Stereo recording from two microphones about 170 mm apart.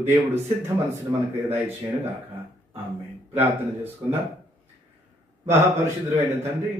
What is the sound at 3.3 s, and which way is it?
Speech, 10° right (ahead or behind).